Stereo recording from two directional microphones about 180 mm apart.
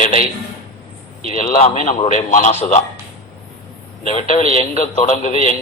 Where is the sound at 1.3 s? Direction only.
45° left (ahead or behind).